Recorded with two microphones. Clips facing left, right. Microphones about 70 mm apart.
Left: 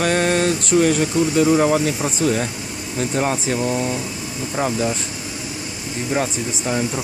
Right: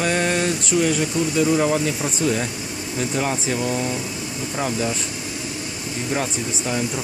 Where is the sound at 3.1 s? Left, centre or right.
Left.